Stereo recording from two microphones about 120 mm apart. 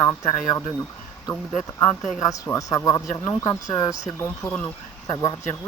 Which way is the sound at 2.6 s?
30° left (ahead or behind).